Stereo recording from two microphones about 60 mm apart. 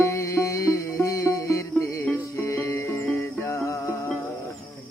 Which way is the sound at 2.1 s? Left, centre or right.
Left.